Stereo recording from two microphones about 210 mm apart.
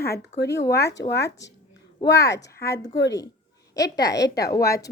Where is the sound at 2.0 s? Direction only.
20° left (ahead or behind).